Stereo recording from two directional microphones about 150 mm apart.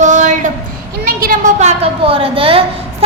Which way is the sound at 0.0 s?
55° right (ahead or behind).